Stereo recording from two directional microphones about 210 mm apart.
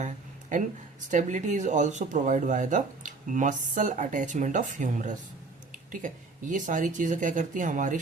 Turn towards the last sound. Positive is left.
turn(degrees=-40)  # may be behind; listen again after turning